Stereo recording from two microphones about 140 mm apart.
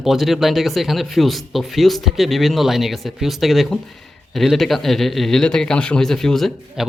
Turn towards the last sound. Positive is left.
turn(degrees=0)  # may be behind; listen again after turning